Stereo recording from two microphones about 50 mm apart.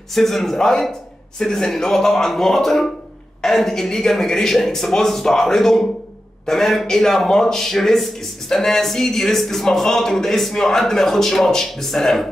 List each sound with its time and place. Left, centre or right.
0.1 s a man's voice: centre